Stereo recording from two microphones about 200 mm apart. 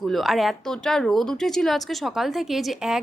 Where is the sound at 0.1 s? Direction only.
Centre (ahead or behind).